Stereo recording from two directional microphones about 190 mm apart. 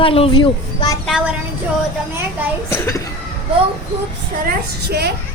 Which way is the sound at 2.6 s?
15° left (ahead or behind).